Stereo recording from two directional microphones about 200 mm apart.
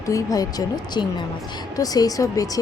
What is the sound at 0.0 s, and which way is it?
A woman's voice, 15° left (ahead or behind).